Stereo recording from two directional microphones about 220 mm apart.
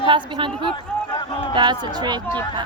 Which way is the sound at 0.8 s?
20° left (ahead or behind).